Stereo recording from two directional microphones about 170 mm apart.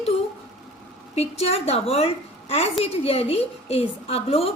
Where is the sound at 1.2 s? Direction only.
40° left (ahead or behind).